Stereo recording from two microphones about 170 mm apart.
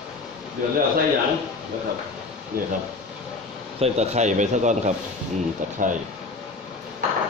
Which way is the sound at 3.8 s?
40° right (ahead or behind).